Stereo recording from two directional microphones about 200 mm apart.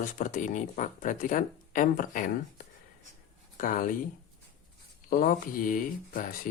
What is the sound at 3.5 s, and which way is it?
Speech, 40° left (ahead or behind).